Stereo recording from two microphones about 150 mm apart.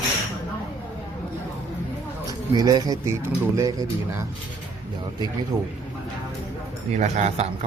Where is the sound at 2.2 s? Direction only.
25° right (ahead or behind).